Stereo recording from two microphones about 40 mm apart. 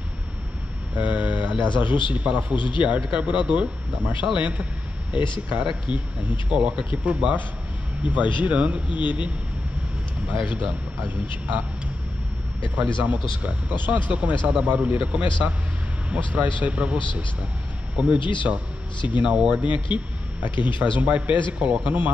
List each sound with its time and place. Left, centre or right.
0.9 s speech: right
5.1 s speech: right
10.4 s speech: right
12.7 s speech: right